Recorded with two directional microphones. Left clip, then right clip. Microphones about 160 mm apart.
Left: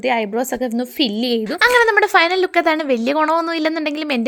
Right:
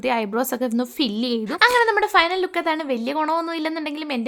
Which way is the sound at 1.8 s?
30° left (ahead or behind).